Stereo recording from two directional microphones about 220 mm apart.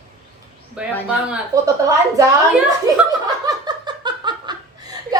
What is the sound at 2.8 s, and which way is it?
Laughter, 15° right (ahead or behind).